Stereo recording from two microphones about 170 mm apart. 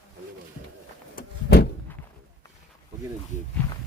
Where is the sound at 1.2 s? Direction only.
65° left (ahead or behind).